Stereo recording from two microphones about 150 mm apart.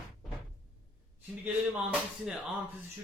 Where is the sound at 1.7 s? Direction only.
10° right (ahead or behind).